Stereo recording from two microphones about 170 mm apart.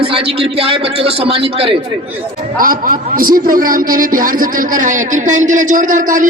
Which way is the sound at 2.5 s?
55° right (ahead or behind).